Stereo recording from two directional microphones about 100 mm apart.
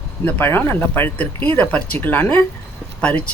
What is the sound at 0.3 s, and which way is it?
Speech, 20° left (ahead or behind).